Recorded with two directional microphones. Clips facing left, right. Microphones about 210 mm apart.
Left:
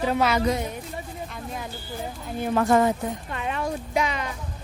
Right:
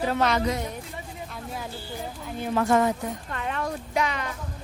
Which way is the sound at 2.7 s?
30° left (ahead or behind).